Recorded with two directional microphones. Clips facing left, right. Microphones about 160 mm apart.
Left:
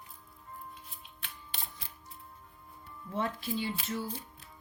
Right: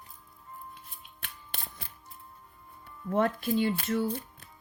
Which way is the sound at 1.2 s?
55° right (ahead or behind).